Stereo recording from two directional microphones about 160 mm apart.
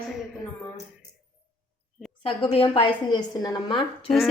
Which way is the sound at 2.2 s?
35° left (ahead or behind).